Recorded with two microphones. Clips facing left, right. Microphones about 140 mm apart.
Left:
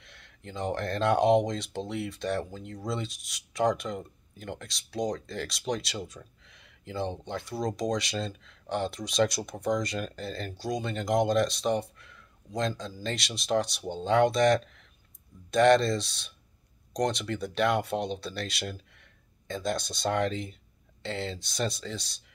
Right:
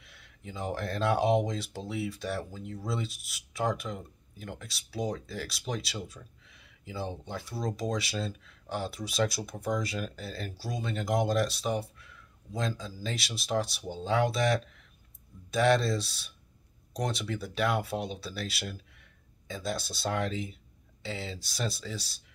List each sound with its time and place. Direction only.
0.0 s speech: 5° right (ahead or behind)